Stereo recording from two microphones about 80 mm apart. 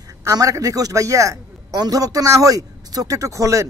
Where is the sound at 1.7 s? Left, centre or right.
Right.